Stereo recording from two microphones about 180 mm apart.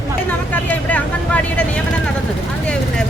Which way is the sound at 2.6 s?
5° left (ahead or behind).